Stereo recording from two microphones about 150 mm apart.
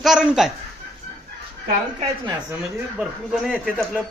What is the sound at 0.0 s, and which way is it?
Speech, 5° right (ahead or behind).